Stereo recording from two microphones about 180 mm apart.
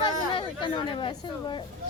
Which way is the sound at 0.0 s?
25° left (ahead or behind).